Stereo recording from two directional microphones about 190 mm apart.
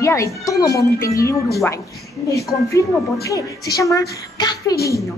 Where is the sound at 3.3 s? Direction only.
20° left (ahead or behind).